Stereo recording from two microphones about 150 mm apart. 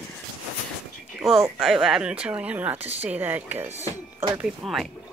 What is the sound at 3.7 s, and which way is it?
Speech, 50° right (ahead or behind).